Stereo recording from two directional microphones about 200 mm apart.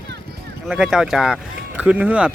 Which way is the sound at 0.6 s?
5° right (ahead or behind).